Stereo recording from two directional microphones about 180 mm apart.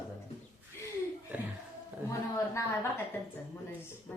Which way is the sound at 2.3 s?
15° left (ahead or behind).